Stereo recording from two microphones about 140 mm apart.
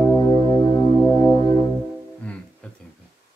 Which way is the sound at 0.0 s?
30° left (ahead or behind).